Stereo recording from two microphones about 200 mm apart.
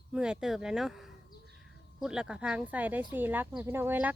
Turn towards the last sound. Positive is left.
turn(degrees=-10)  # may be behind; listen again after turning